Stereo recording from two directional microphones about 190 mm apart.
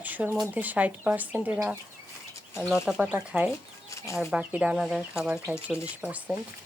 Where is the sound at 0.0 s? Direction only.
10° right (ahead or behind).